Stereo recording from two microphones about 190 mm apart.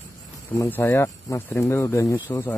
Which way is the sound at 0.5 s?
10° left (ahead or behind).